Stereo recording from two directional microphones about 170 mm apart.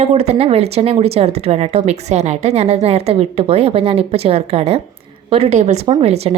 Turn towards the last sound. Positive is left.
turn(degrees=-40)  # may be behind; listen again after turning